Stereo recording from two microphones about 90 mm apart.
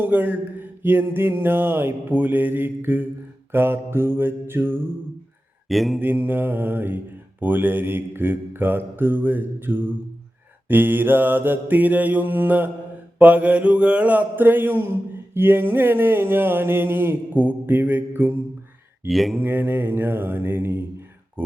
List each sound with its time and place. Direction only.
0.0 s mantra: 20° right (ahead or behind)
5.6 s mantra: centre (ahead or behind)
6.0 s mantra: 20° right (ahead or behind)
19.0 s mantra: centre (ahead or behind)
19.4 s mantra: 20° right (ahead or behind)